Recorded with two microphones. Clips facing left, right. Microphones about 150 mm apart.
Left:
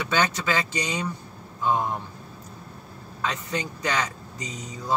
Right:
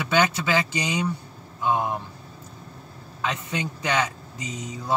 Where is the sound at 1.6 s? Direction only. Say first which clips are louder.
Even; 15° right (ahead or behind).